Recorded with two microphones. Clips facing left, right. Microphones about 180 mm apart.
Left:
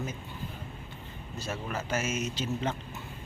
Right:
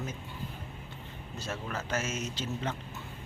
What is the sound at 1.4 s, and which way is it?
Speech, 5° left (ahead or behind).